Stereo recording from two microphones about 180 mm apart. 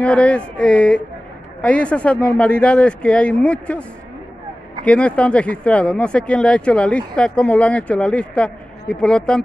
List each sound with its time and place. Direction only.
0.0 s speech: 5° left (ahead or behind)
4.8 s speech: 5° left (ahead or behind)